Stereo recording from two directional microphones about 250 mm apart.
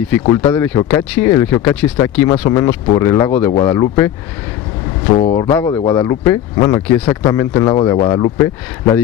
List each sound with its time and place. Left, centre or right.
0.3 s speech: centre
5.2 s speech: left
5.5 s speech: centre